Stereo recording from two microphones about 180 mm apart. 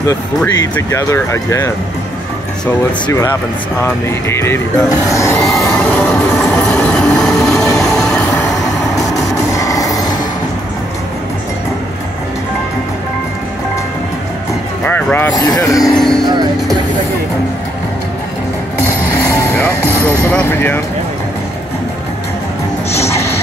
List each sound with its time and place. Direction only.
0.6 s speech: 20° left (ahead or behind)
2.6 s speech: 10° left (ahead or behind)
3.8 s music: 15° left (ahead or behind)
9.5 s train: 20° left (ahead or behind)
14.9 s a sound: 10° left (ahead or behind)
15.3 s speech: 20° left (ahead or behind)
16.0 s music: centre (ahead or behind)
19.5 s music: 10° left (ahead or behind)